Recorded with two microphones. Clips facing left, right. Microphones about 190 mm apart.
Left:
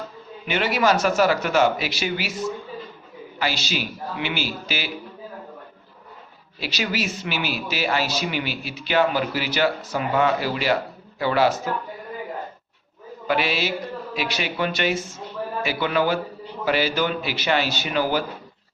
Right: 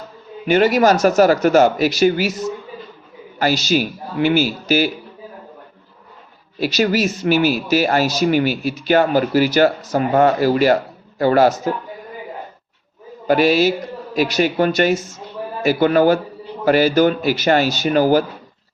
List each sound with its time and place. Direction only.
0.4 s speech: 45° right (ahead or behind)
3.3 s speech: 45° right (ahead or behind)
6.6 s speech: 45° right (ahead or behind)
13.2 s a man's voice: 40° right (ahead or behind)